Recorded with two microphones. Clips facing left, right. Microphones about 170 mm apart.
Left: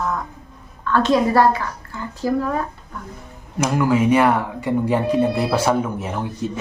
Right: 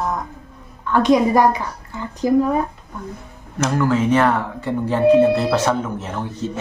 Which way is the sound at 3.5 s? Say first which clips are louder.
Even; 10° left (ahead or behind).